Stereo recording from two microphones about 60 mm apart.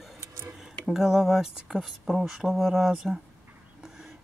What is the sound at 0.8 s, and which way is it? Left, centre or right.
Speech, centre.